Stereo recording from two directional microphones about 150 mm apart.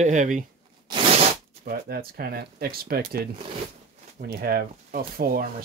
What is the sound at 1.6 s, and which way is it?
Speech, 90° right.